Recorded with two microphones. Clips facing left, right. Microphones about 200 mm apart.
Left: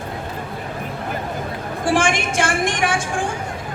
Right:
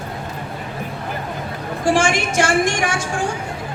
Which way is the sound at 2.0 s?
55° left (ahead or behind).